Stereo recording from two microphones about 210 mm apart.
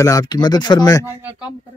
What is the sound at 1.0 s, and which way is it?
Speech, 10° right (ahead or behind).